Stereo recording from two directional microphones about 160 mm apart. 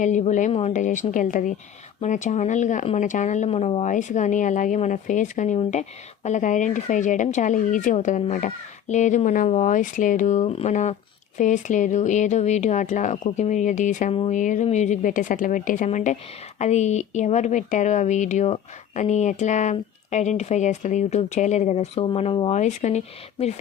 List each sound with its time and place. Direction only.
0.0 s speech: 50° left (ahead or behind); by 22.5 s 35° left (ahead or behind)
22.5 s speech: 45° left (ahead or behind)